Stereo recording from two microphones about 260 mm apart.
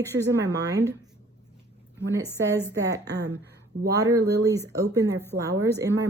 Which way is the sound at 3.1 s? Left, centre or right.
Right.